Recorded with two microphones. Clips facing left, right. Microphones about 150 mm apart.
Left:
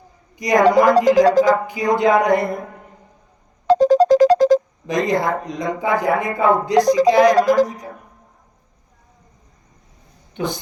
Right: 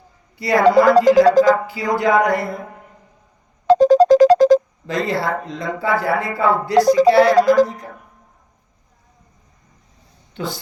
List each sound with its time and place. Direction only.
0.3 s speech: 15° left (ahead or behind)
3.7 s music: 90° right
4.9 s speech: 15° left (ahead or behind)
10.3 s speech: 20° left (ahead or behind)